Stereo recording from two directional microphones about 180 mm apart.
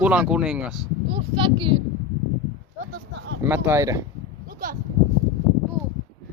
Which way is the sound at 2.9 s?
85° right.